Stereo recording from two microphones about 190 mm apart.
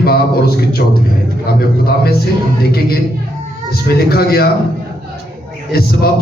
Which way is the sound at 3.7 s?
55° left (ahead or behind).